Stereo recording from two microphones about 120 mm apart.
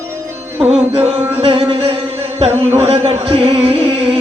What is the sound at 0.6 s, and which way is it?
Music, 55° right (ahead or behind).